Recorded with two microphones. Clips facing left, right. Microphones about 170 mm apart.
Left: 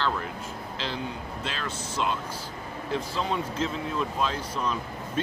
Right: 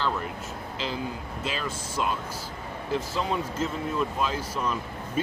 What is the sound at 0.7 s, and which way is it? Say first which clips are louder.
Speech: right 2 dB; 5° right (ahead or behind).